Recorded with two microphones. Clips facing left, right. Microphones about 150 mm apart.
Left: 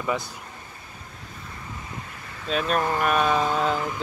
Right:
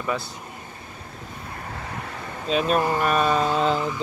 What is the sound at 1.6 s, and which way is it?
Vehicle, 60° right (ahead or behind).